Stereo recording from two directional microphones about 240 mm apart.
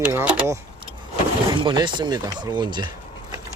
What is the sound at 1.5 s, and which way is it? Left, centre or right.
Speech, centre.